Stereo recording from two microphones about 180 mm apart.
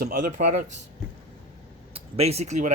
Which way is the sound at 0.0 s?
50° right (ahead or behind).